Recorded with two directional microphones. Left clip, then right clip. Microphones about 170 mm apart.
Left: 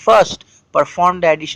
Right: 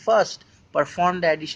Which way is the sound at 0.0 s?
35° left (ahead or behind).